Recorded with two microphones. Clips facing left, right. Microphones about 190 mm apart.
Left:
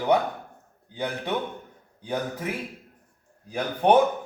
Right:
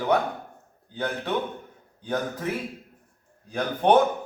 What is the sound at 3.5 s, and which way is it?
Speech, 10° left (ahead or behind).